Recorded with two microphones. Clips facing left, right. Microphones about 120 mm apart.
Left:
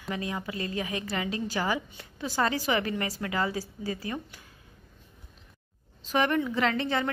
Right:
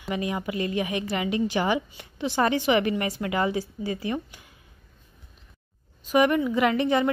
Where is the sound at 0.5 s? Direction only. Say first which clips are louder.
Right 6 dB; 35° left (ahead or behind).